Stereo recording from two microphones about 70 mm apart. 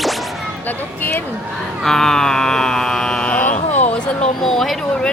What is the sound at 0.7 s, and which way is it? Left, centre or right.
Speech, left.